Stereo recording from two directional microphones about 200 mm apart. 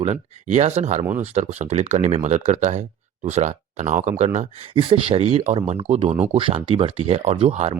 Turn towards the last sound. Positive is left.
turn(degrees=-30)  # may be behind; listen again after turning